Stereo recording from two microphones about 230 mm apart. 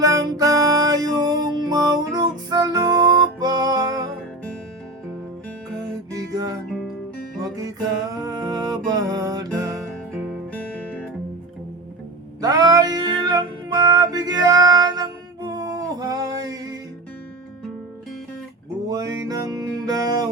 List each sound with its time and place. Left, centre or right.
0.0 s music: centre
6.1 s music: centre
6.7 s music: centre
7.4 s music: centre
10.1 s music: centre
12.4 s music: centre
18.9 s music: centre